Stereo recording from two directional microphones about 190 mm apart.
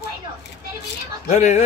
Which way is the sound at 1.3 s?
40° left (ahead or behind).